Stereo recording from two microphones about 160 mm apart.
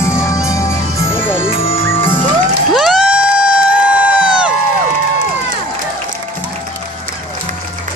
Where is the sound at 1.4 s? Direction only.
35° left (ahead or behind).